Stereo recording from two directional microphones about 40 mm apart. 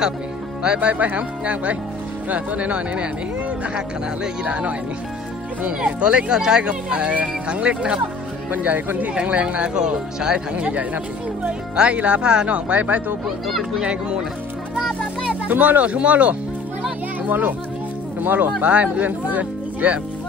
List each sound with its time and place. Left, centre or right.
0.7 s speech: right
6.3 s speech: centre
8.5 s speech: right
9.1 s speech: right
10.5 s speech: right
13.5 s speech: centre
13.8 s speech: right
15.4 s speech: right
17.3 s a child's voice: right